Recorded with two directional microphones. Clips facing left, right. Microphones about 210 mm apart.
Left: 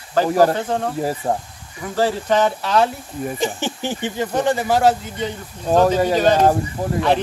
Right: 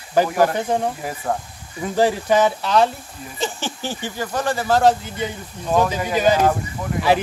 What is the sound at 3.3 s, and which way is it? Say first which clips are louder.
Speech: even; 15° left (ahead or behind).